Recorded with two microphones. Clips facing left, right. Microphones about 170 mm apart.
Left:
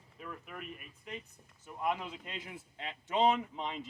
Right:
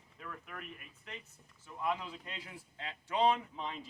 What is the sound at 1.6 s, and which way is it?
Speech, 20° left (ahead or behind).